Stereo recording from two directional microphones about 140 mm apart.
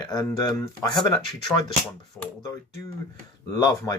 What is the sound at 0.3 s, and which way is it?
Speech, 25° left (ahead or behind).